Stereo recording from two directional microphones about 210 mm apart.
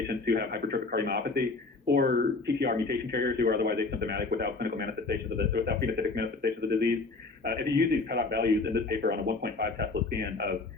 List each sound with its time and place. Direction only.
0.1 s a man's voice: 50° right (ahead or behind)